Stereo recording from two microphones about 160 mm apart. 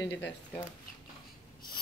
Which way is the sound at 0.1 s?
10° left (ahead or behind).